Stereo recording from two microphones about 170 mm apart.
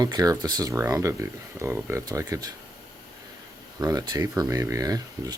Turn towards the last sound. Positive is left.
turn(degrees=-20)  # may be behind; listen again after turning